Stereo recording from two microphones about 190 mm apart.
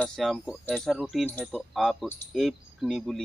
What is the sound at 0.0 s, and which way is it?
Speech, centre (ahead or behind).